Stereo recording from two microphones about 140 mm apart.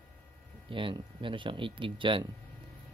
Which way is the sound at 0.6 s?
40° right (ahead or behind).